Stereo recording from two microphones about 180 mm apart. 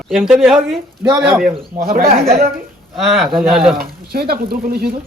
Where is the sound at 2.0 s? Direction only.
35° right (ahead or behind).